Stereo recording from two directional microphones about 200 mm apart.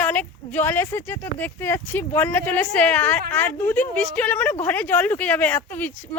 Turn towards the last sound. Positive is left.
turn(degrees=10)  # may be behind; listen again after turning